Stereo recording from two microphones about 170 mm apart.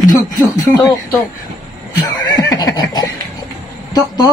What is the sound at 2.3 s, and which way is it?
Neigh, 20° left (ahead or behind).